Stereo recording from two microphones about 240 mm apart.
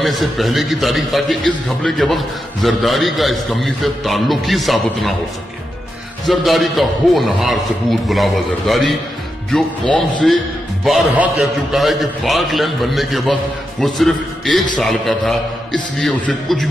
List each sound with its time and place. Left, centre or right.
0.0 s a man's voice: centre
6.2 s a man's voice: centre